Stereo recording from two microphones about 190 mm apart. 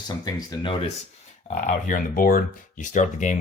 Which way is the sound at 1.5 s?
40° left (ahead or behind).